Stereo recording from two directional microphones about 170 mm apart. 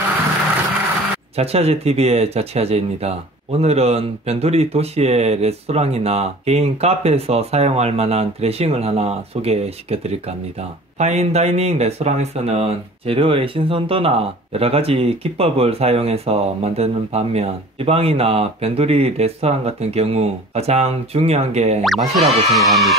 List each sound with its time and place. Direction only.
1.3 s speech: 35° right (ahead or behind)
21.8 s music: centre (ahead or behind)